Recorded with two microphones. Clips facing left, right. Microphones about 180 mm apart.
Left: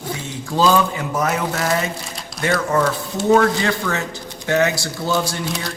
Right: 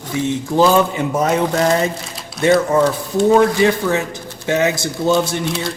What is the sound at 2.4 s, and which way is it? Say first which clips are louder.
Speech: right 5 dB; 20° right (ahead or behind).